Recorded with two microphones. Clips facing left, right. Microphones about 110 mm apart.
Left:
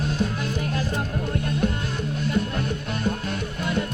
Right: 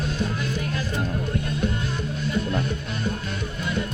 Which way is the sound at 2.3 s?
55° left (ahead or behind).